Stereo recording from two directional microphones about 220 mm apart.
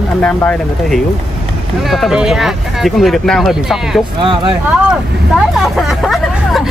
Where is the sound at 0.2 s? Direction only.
5° left (ahead or behind).